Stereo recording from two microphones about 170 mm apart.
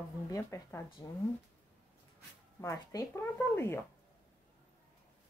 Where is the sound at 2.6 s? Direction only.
20° left (ahead or behind).